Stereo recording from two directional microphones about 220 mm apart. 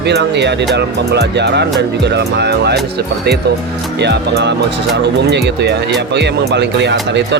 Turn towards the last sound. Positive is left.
turn(degrees=-50)  # may be behind; listen again after turning